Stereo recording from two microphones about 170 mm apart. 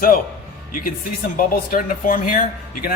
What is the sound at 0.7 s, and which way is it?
Speech, 55° left (ahead or behind).